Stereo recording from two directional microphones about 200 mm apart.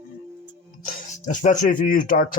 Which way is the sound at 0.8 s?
40° left (ahead or behind).